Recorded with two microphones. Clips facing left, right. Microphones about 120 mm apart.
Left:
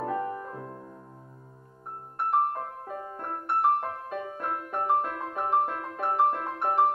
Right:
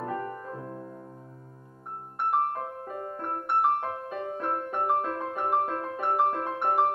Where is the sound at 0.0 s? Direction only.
5° left (ahead or behind).